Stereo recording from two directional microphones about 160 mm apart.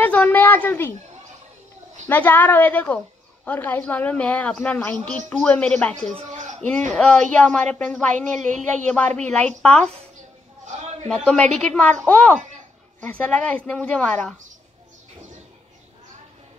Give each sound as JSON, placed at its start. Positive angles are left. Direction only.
{"t": 0.0, "sound": "a child's voice", "side_deg": 10}
{"t": 2.0, "sound": "a woman's voice", "side_deg": 10}
{"t": 6.3, "sound": "a sound", "side_deg": -50}
{"t": 7.0, "sound": "a woman's voice", "side_deg": 5}
{"t": 11.1, "sound": "a woman's voice", "side_deg": 5}